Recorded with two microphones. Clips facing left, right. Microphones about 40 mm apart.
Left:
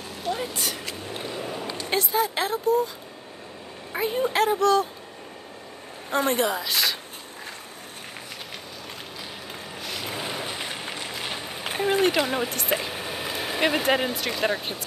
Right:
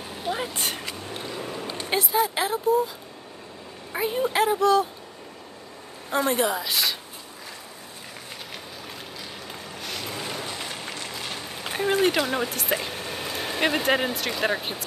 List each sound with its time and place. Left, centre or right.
0.1 s vehicle: centre
1.1 s vehicle: centre
1.9 s speech: centre
3.9 s speech: centre
6.0 s a woman's voice: centre
9.8 s boat: centre
10.0 s a sound: centre
11.7 s speech: centre